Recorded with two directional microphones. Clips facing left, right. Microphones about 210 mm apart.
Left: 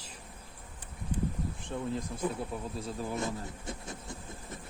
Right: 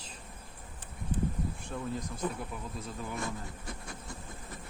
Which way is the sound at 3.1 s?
20° left (ahead or behind).